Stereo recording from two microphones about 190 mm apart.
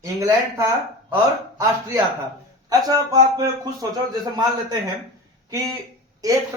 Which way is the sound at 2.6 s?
20° right (ahead or behind).